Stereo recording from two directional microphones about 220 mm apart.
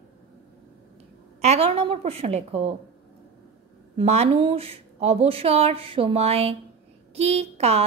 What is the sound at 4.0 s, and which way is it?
A woman's voice, 25° right (ahead or behind).